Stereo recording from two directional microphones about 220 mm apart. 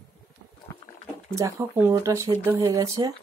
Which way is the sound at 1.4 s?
15° right (ahead or behind).